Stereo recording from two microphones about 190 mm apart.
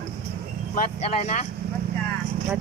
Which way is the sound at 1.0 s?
35° left (ahead or behind).